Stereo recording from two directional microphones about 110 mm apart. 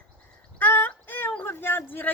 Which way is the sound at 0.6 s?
15° left (ahead or behind).